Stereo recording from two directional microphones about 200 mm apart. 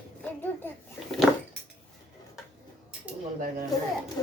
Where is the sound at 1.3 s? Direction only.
Centre (ahead or behind).